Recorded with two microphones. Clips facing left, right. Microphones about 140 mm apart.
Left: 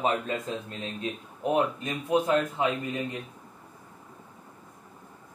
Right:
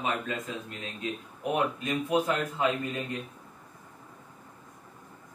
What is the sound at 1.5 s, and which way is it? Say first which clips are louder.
A man's voice: left 1 dB; 20° left (ahead or behind).